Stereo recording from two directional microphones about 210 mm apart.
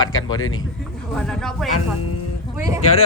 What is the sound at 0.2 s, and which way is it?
Speech, 80° left.